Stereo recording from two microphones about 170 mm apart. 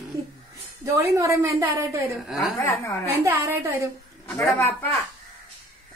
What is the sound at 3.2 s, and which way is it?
Speech, 15° right (ahead or behind).